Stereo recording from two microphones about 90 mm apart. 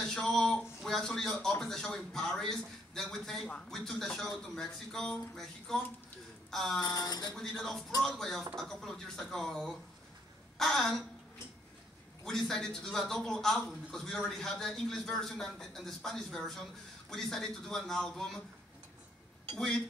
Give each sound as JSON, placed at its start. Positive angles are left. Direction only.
{"t": 0.0, "sound": "a man's voice", "side_deg": 5}
{"t": 6.8, "sound": "speech", "side_deg": 45}
{"t": 7.3, "sound": "a man's voice", "side_deg": 5}
{"t": 12.3, "sound": "a man's voice", "side_deg": 5}
{"t": 19.5, "sound": "a man's voice", "side_deg": 5}